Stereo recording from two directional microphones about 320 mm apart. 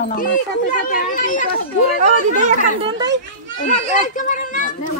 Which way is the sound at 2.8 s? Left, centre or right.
Centre.